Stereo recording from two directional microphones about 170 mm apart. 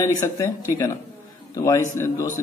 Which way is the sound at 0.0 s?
20° left (ahead or behind).